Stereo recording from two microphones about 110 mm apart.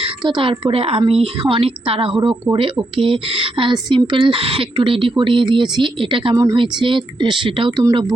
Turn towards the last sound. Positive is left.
turn(degrees=-50)  # may be behind; listen again after turning